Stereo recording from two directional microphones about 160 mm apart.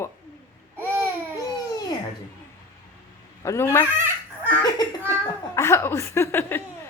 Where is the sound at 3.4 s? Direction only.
15° left (ahead or behind).